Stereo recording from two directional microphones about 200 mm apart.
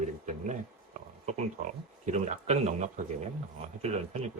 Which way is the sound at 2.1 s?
35° right (ahead or behind).